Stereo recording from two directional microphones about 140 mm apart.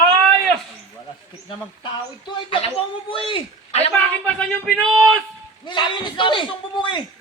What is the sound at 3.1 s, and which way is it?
Speech, 40° left (ahead or behind).